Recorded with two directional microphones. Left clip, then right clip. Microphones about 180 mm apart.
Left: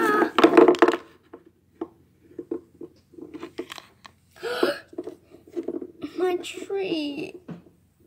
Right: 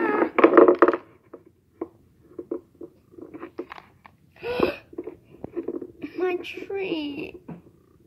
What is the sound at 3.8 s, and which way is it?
Biting, 10° left (ahead or behind).